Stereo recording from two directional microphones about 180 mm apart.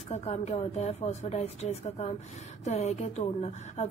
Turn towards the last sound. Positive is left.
turn(degrees=40)  # may be behind; listen again after turning